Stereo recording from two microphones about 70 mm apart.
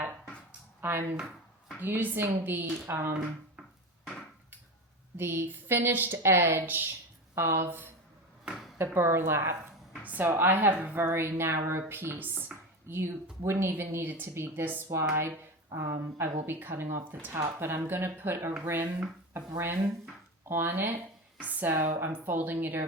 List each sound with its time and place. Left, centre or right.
0.8 s a woman's voice: right
5.1 s a woman's voice: right
7.3 s speech: right
7.7 s a woman's voice: right
14.9 s a woman's voice: right